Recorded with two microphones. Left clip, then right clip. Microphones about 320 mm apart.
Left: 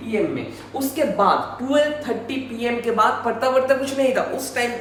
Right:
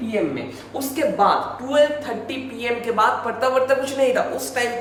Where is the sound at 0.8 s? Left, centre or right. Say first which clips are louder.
Right 1 dB; centre.